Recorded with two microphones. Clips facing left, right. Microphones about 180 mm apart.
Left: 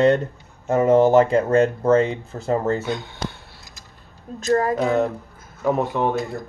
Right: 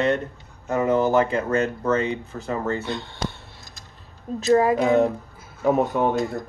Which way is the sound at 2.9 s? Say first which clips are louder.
Left 2 dB; centre (ahead or behind).